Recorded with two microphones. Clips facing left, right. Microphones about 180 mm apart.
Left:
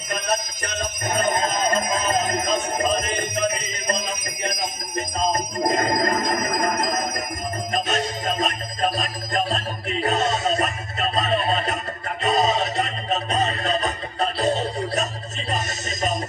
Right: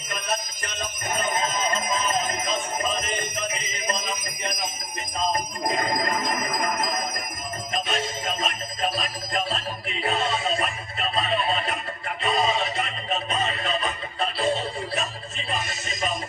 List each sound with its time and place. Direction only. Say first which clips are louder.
0.1 s jingle bell: left 5 dB; 40° left (ahead or behind)
3.5 s music: left 3 dB; 40° left (ahead or behind)
4.4 s jingle bell: left 4 dB; 40° left (ahead or behind)
7.7 s music: left 3 dB; 40° left (ahead or behind)